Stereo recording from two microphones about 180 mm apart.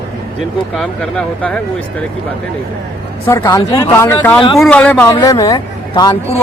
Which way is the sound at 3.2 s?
15° left (ahead or behind).